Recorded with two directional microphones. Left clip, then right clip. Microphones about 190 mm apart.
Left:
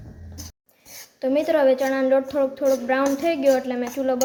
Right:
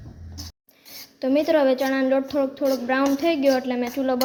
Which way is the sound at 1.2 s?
5° right (ahead or behind).